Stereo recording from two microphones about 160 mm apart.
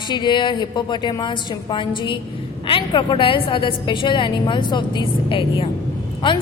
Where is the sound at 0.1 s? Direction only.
30° left (ahead or behind).